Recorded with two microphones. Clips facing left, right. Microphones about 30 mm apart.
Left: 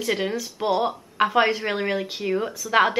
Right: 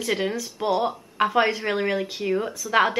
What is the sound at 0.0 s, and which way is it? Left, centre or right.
A woman's voice, centre.